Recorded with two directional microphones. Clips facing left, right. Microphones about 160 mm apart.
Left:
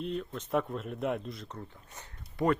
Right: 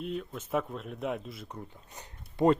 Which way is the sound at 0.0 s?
5° right (ahead or behind).